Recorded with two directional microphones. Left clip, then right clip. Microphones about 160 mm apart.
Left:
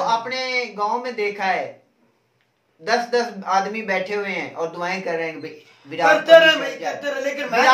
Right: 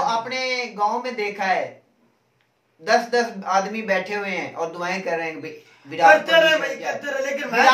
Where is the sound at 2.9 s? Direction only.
20° right (ahead or behind).